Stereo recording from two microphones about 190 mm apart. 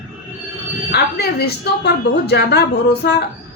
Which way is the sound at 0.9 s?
60° left (ahead or behind).